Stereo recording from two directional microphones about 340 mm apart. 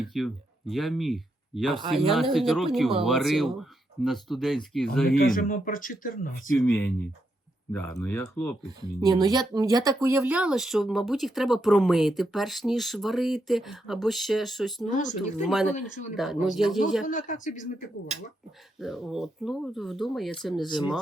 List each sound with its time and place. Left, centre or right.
0.0 s speech: centre
5.1 s speech: left
6.6 s speech: centre
8.8 s speech: centre
14.8 s speech: left
15.4 s speech: centre
15.7 s speech: left
16.1 s speech: centre
17.1 s speech: left
18.8 s speech: centre